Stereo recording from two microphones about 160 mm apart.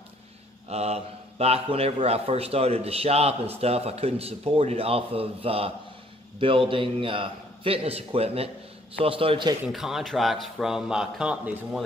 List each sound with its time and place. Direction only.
0.7 s a man's voice: 40° right (ahead or behind)
9.7 s speech: centre (ahead or behind)